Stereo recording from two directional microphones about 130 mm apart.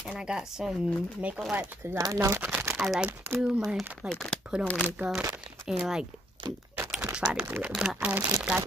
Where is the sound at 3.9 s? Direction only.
5° left (ahead or behind).